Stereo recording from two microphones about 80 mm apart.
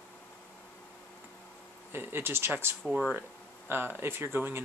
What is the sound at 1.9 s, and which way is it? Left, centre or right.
Speech, right.